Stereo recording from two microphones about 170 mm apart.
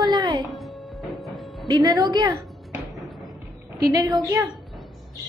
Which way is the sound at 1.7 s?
25° right (ahead or behind).